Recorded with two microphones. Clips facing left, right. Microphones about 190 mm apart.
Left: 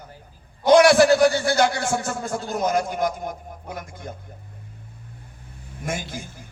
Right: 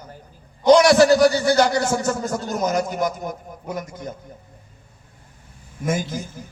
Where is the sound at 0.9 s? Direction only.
40° right (ahead or behind).